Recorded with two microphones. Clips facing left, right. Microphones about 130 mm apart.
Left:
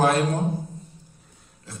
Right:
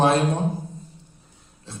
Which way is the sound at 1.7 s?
25° right (ahead or behind).